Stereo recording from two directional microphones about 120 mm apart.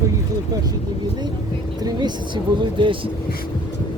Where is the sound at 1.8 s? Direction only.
35° right (ahead or behind).